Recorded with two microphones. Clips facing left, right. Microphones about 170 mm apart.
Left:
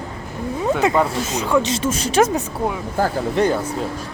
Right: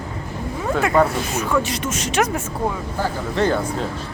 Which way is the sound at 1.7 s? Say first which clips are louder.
Left 4 dB; 30° left (ahead or behind).